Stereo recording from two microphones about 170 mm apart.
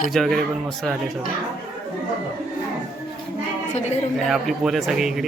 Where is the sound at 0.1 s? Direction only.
Centre (ahead or behind).